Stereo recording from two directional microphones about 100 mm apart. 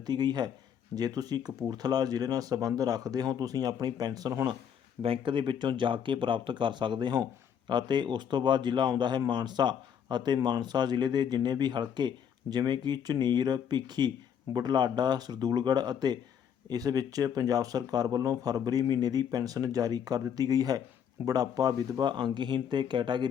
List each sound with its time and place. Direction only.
0.0 s speech: 45° right (ahead or behind)
5.0 s speech: 60° right (ahead or behind)